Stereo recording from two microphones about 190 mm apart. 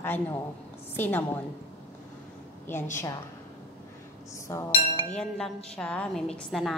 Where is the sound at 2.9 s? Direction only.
15° left (ahead or behind).